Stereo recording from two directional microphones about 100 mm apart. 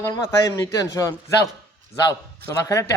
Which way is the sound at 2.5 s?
35° left (ahead or behind).